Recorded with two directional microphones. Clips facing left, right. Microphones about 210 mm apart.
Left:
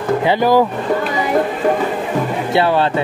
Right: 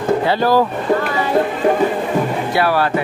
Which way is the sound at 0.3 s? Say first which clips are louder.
Left 4 dB; 15° left (ahead or behind).